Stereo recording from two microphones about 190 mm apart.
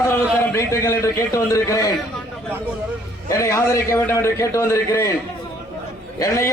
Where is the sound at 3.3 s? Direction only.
15° left (ahead or behind).